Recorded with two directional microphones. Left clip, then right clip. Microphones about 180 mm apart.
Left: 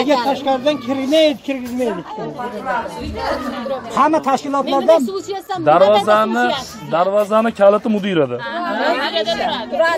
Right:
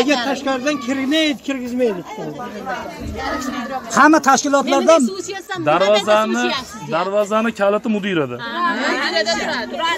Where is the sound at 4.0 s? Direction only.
60° right (ahead or behind).